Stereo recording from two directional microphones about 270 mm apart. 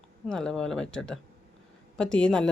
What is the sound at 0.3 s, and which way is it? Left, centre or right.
Speech, centre.